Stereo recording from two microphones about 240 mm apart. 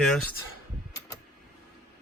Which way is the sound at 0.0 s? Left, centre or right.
Centre.